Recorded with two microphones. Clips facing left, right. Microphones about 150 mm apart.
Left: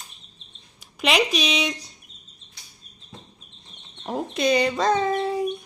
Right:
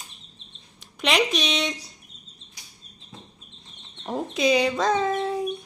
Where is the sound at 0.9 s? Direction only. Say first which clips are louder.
Left 1 dB; centre (ahead or behind).